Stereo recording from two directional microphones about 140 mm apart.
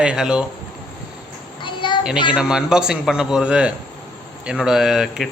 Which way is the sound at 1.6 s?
35° left (ahead or behind).